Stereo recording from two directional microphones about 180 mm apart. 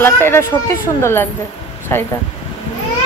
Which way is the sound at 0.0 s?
15° left (ahead or behind).